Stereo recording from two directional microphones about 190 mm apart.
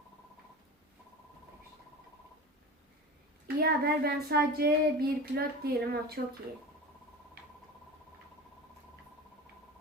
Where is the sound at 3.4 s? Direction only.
55° right (ahead or behind).